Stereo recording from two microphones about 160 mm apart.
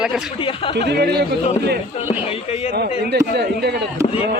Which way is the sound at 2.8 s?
90° right.